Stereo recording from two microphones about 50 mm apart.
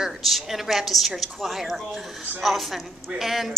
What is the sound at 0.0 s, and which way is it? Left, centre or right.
A woman's voice, centre.